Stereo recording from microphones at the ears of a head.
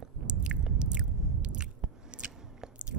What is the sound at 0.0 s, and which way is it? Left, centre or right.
Biting, right.